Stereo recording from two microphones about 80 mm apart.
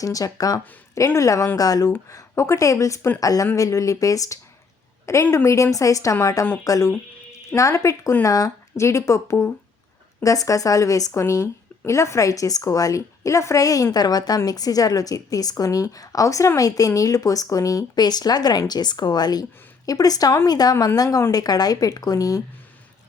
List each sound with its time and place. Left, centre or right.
0.0 s a woman's voice: left
2.0 s a woman's voice: left